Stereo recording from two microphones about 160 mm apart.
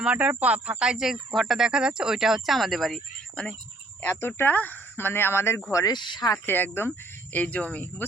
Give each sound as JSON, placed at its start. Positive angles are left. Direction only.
{"t": 0.0, "sound": "speech", "side_deg": -10}
{"t": 4.0, "sound": "speech", "side_deg": 15}